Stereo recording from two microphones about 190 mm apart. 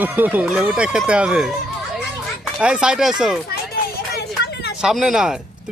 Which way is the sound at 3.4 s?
55° left (ahead or behind).